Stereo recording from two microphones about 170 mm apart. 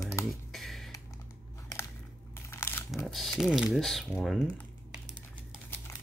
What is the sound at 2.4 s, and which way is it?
Crumpling, 15° left (ahead or behind).